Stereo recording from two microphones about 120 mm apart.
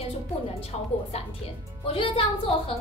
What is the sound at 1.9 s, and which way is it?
Speech, 45° left (ahead or behind).